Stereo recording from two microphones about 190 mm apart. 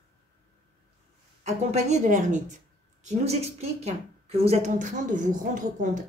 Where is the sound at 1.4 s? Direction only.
35° right (ahead or behind).